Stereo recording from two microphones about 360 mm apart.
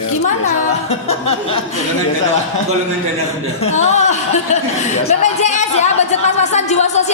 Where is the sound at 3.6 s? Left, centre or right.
Centre.